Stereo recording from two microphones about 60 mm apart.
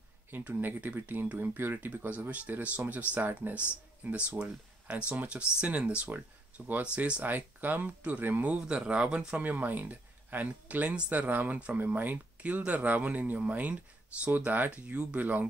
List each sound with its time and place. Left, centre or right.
0.3 s speech: right
8.5 s speech: centre
9.4 s speech: right